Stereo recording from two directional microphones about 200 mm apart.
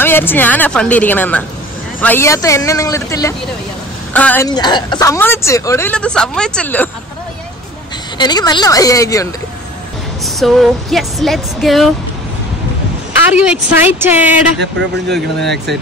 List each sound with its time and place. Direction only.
0.0 s speech: 10° left (ahead or behind)
4.5 s speech: 20° left (ahead or behind)
8.2 s speech: 20° left (ahead or behind)
10.2 s a woman's voice: centre (ahead or behind)
13.3 s a woman's voice: 5° right (ahead or behind)
15.5 s speech: 55° right (ahead or behind)